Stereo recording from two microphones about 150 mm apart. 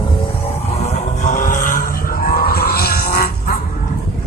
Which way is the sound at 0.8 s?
50° left (ahead or behind).